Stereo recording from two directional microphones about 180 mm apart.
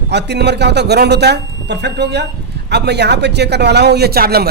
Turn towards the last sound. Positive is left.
turn(degrees=-60)  # may be behind; listen again after turning